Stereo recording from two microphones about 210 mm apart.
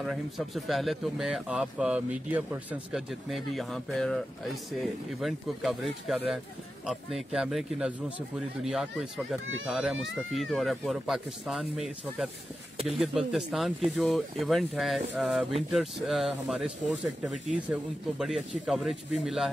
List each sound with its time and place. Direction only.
0.0 s speech: centre (ahead or behind)